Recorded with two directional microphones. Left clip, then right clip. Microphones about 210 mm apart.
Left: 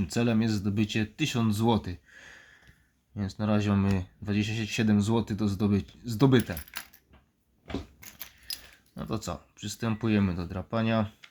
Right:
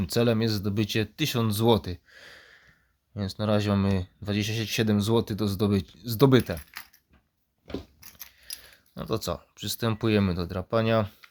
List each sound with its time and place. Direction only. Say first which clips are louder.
0.0 s speech: right 4 dB; 50° right (ahead or behind)
9.0 s speech: right 5 dB; 45° right (ahead or behind)